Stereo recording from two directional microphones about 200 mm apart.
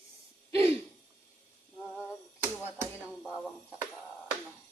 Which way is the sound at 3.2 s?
Centre (ahead or behind).